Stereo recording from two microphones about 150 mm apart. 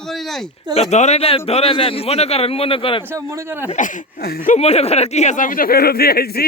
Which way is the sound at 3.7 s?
60° left (ahead or behind).